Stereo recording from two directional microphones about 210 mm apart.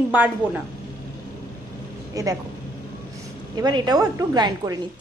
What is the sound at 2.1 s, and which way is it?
Speech, 15° right (ahead or behind).